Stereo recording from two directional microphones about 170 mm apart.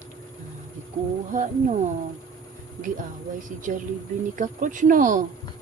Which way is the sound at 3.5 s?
50° right (ahead or behind).